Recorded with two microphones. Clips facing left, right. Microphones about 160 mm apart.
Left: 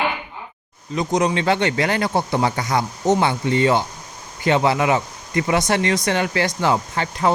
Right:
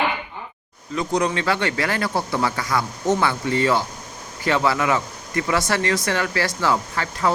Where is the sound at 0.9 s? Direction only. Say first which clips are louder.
Left 2 dB; 20° left (ahead or behind).